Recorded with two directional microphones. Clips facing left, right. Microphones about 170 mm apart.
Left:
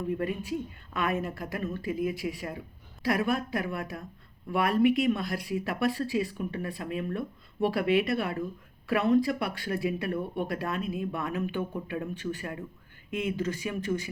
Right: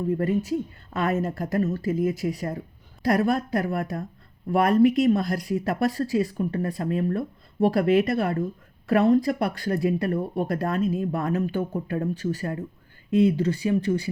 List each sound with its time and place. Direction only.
0.1 s speech: 40° right (ahead or behind)